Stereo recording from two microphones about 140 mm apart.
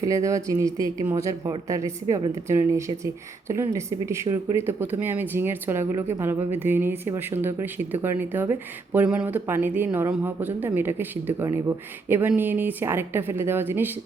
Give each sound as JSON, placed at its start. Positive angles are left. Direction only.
{"t": 0.0, "sound": "a woman's voice", "side_deg": -25}